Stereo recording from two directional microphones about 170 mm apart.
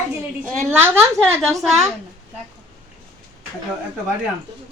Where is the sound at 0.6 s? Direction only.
15° right (ahead or behind).